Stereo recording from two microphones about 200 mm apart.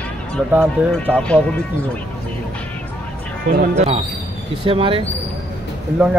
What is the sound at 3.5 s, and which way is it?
Speech, 40° right (ahead or behind).